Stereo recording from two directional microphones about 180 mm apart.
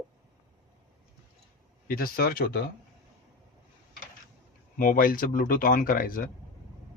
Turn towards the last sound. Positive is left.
turn(degrees=50)  # may be behind; listen again after turning